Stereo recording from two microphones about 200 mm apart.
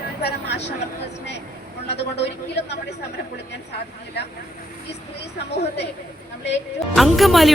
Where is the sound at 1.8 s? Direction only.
60° left (ahead or behind).